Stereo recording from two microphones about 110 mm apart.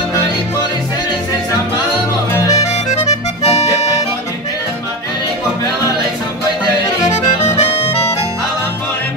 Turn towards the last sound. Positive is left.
turn(degrees=75)  # may be behind; listen again after turning